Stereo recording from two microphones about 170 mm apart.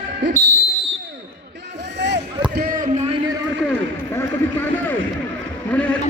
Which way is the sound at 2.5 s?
65° right (ahead or behind).